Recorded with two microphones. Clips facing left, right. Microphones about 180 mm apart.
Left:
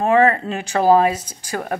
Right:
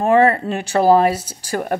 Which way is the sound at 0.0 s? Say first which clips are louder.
Right 1 dB; 40° right (ahead or behind).